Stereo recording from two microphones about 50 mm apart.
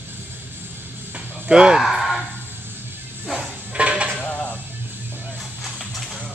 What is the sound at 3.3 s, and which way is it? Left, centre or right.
Dishes, right.